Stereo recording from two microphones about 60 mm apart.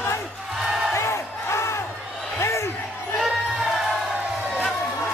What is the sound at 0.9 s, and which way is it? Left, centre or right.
Crowd, left.